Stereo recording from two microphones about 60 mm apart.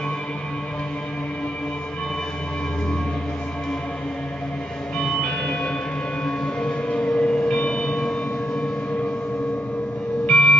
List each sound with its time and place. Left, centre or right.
4.9 s music: centre
6.2 s church bell: centre
10.2 s music: centre